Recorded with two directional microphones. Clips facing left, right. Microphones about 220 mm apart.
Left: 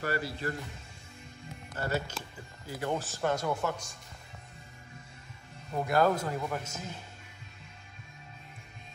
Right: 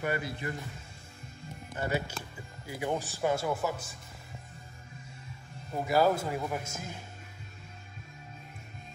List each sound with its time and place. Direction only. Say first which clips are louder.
0.0 s a man's voice: even; 20° right (ahead or behind)
1.7 s speech: right 1 dB; 15° right (ahead or behind)
5.9 s speech: right 1 dB; 5° right (ahead or behind)